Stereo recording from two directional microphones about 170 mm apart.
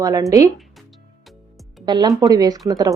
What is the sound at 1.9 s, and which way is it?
Speech, 20° right (ahead or behind).